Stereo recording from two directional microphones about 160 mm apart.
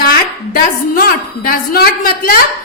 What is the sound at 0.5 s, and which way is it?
A woman's voice, 65° left (ahead or behind).